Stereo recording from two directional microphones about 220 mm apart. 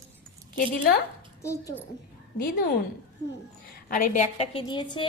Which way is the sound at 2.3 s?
40° left (ahead or behind).